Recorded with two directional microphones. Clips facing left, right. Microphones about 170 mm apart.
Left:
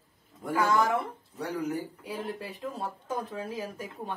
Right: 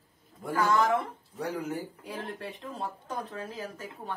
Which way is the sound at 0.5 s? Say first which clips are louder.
Even; 10° left (ahead or behind).